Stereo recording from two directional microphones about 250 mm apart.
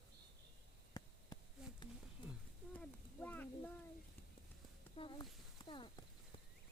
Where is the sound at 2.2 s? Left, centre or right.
Left.